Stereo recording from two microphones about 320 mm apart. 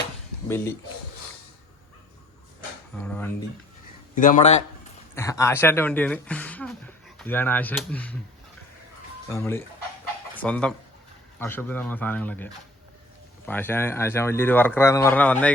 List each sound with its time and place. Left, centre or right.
0.4 s speech: centre
3.0 s speech: centre
4.1 s a man's voice: left
5.1 s speech: centre
9.3 s speech: centre